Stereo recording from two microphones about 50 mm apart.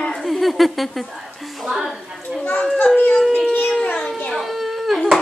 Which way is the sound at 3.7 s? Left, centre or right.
Centre.